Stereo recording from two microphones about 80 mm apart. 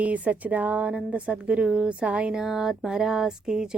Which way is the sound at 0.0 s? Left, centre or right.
Centre.